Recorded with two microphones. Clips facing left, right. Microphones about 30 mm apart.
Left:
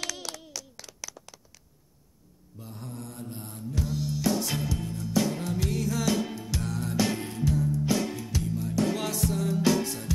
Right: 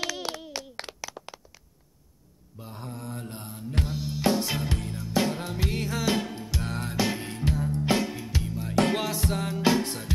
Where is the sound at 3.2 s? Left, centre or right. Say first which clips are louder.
Even; right.